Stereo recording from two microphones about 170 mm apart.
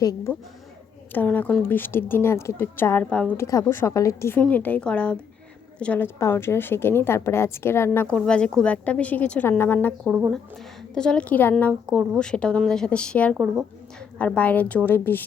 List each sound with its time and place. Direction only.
0.0 s speech: 20° left (ahead or behind)
1.1 s a woman's voice: 10° left (ahead or behind)
3.3 s a woman's voice: 20° left (ahead or behind)
10.1 s speech: 10° right (ahead or behind)
10.9 s a woman's voice: 5° left (ahead or behind)